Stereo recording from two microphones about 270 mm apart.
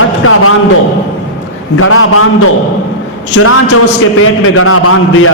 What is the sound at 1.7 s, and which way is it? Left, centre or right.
Speech, left.